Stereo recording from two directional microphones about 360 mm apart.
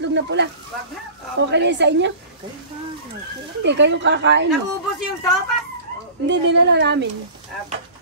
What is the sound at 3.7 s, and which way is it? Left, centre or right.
Speech, right.